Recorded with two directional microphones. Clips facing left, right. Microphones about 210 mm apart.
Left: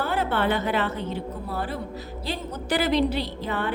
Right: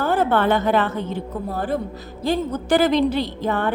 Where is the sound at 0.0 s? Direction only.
45° right (ahead or behind).